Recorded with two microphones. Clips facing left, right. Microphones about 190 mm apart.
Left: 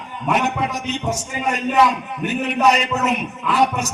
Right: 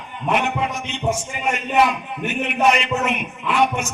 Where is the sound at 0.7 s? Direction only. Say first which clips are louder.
Even; 40° left (ahead or behind).